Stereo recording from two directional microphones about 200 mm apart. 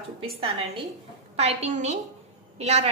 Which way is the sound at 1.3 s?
30° right (ahead or behind).